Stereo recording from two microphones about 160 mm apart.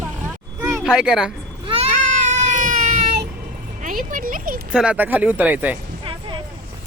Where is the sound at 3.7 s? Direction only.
55° right (ahead or behind).